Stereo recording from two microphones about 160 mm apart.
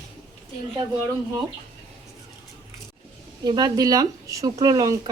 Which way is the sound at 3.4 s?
25° right (ahead or behind).